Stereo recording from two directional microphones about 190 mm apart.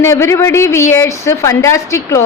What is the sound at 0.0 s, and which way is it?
Speech, 15° left (ahead or behind).